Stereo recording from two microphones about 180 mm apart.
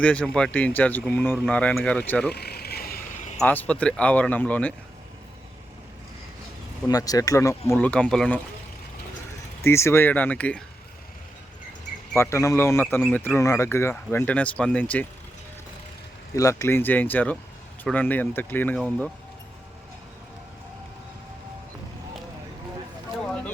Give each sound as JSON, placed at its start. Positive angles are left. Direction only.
{"t": 0.0, "sound": "speech", "side_deg": 5}
{"t": 2.3, "sound": "vehicle", "side_deg": 60}
{"t": 3.3, "sound": "speech", "side_deg": 10}
{"t": 6.8, "sound": "speech", "side_deg": 20}
{"t": 9.6, "sound": "speech", "side_deg": 15}
{"t": 12.1, "sound": "speech", "side_deg": 15}
{"t": 16.3, "sound": "speech", "side_deg": 15}